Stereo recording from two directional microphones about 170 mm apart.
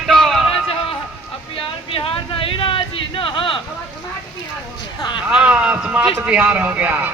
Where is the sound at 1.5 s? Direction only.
30° left (ahead or behind).